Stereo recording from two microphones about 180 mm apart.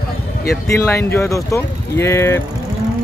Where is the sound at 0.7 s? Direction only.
15° left (ahead or behind).